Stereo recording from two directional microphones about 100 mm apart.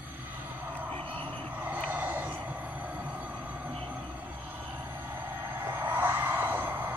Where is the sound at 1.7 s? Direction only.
15° right (ahead or behind).